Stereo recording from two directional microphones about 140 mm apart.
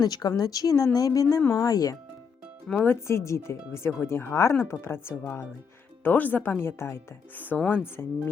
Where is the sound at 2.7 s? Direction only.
15° left (ahead or behind).